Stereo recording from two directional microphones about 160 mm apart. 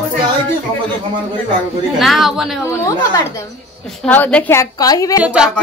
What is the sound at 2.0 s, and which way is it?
Speech, centre (ahead or behind).